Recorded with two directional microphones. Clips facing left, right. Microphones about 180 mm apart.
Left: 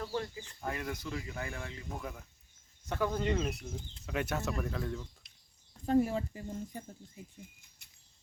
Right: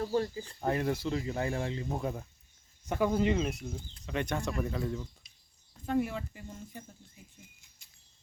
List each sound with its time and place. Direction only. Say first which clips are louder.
0.0 s speech: right 6 dB; 35° right (ahead or behind)
2.8 s speech: right 5 dB; 15° right (ahead or behind)
3.2 s speech: right 3 dB; centre (ahead or behind)
5.8 s speech: left 3 dB; 35° left (ahead or behind)